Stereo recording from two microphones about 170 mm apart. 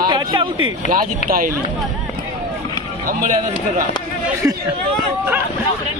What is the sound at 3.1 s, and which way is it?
Speech, 50° right (ahead or behind).